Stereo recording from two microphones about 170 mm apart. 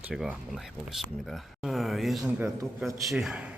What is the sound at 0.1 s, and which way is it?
Speech, centre (ahead or behind).